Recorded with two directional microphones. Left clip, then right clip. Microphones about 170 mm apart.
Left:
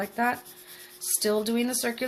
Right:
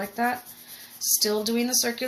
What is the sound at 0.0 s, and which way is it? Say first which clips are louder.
Speech: even; 25° left (ahead or behind).